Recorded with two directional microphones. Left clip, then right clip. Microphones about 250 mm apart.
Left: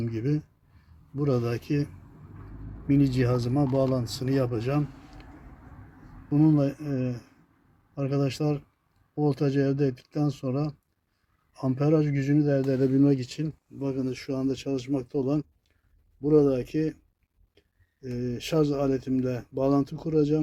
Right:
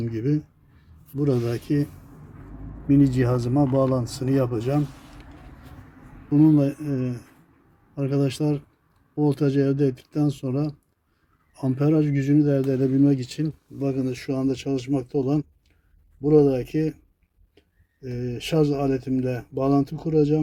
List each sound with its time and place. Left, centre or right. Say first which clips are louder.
0.0 s speech: right 4 dB; centre
6.3 s speech: right 5 dB; centre
13.7 s a man's voice: right 4 dB; centre
18.0 s speech: right 2 dB; centre